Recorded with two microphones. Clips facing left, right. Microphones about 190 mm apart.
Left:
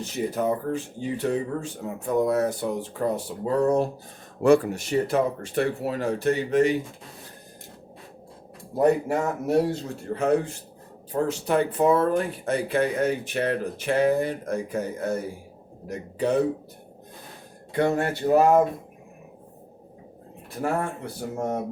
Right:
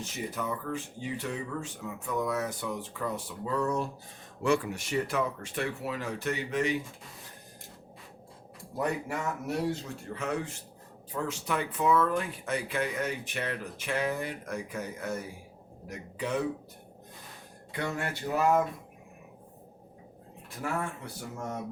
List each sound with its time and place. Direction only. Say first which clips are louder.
0.0 s speech: left 9 dB; 35° left (ahead or behind)
8.7 s speech: left 11 dB; 35° left (ahead or behind)
17.7 s speech: left 11 dB; 40° left (ahead or behind)
20.6 s speech: left 7 dB; 50° left (ahead or behind)
21.0 s speech: left 9 dB; 35° left (ahead or behind)